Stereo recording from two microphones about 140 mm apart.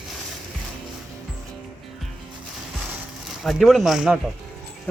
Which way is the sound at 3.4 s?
Centre (ahead or behind).